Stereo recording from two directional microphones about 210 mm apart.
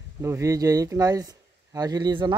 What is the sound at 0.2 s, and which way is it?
Speech, 15° right (ahead or behind).